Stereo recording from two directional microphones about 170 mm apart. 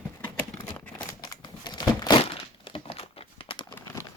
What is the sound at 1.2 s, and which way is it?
Crumpling, 25° left (ahead or behind).